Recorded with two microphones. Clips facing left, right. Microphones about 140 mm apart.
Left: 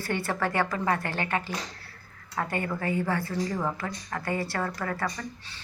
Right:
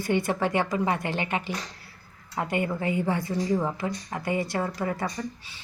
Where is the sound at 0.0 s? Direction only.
15° right (ahead or behind).